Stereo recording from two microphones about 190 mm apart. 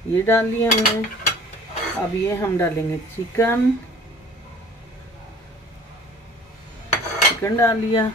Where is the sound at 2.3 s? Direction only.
15° left (ahead or behind).